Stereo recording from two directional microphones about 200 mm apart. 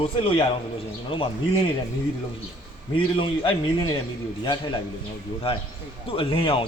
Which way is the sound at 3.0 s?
25° left (ahead or behind).